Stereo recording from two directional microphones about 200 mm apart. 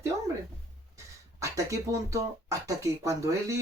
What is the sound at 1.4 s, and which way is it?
Speech, 15° right (ahead or behind).